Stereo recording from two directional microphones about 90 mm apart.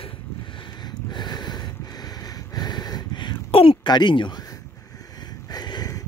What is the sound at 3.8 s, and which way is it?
Speech, 55° left (ahead or behind).